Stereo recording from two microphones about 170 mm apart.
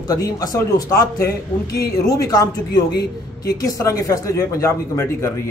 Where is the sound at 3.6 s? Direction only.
20° left (ahead or behind).